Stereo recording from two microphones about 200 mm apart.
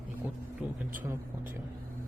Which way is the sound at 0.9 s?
10° right (ahead or behind).